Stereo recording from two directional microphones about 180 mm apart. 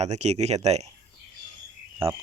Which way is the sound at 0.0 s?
40° right (ahead or behind).